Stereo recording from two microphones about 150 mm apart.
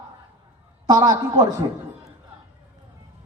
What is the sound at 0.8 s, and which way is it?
Speech, 30° right (ahead or behind).